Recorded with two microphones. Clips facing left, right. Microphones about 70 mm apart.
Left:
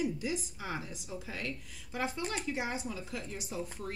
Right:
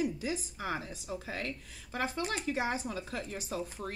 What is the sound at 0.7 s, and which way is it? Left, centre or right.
A woman's voice, right.